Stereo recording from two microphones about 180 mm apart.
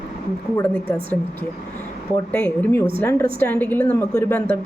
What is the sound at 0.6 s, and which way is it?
Speech, 10° left (ahead or behind).